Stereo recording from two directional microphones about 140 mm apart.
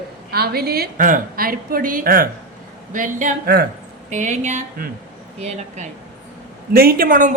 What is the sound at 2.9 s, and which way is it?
Speech, 65° right (ahead or behind).